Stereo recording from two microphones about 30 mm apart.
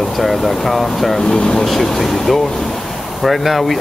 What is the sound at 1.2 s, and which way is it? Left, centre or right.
Speech, left.